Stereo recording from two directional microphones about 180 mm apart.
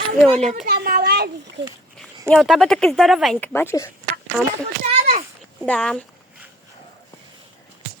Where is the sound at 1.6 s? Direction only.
75° right (ahead or behind).